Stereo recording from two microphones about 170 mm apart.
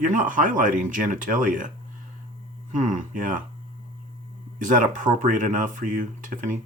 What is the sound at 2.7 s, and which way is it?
Speech, 45° right (ahead or behind).